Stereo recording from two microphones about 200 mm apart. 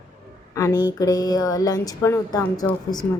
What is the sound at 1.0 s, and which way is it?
A woman's voice, 20° left (ahead or behind).